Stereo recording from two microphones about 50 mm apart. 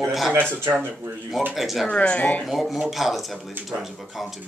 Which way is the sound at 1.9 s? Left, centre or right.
Left.